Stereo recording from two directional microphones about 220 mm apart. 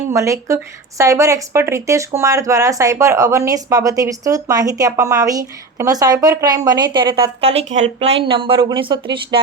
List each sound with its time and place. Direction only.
0.1 s a woman's voice: 15° right (ahead or behind)